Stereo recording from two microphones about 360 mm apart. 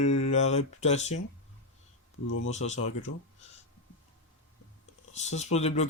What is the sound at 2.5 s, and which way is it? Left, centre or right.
Speech, centre.